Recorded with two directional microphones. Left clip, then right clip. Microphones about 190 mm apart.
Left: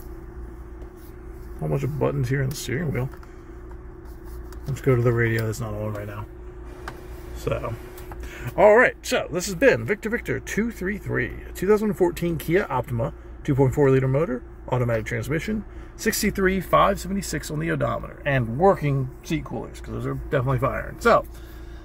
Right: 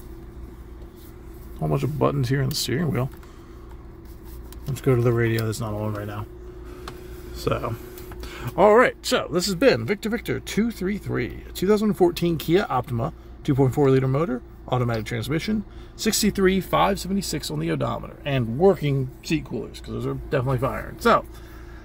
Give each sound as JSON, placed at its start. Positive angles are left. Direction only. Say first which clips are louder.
{"t": 1.6, "sound": "speech", "louder": "right 2 dB", "side_deg": -20}
{"t": 4.7, "sound": "speech", "louder": "even", "side_deg": -20}
{"t": 7.4, "sound": "speech", "louder": "right 2 dB", "side_deg": -30}
{"t": 8.5, "sound": "speech", "louder": "left 1 dB", "side_deg": -20}
{"t": 20.1, "sound": "speech", "louder": "even", "side_deg": 0}